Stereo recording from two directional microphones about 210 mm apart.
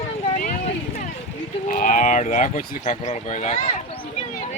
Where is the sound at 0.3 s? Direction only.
40° left (ahead or behind).